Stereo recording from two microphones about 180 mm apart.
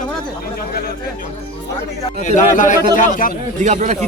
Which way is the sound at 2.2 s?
45° left (ahead or behind).